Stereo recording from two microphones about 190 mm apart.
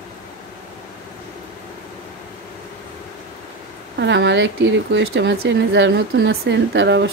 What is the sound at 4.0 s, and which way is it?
Speech, 70° right (ahead or behind).